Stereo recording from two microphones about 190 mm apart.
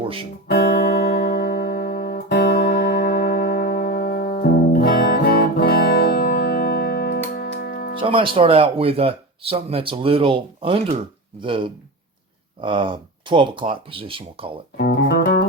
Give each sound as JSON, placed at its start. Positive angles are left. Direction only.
{"t": 0.4, "sound": "music", "side_deg": 55}
{"t": 7.9, "sound": "speech", "side_deg": -25}
{"t": 14.8, "sound": "speech", "side_deg": 55}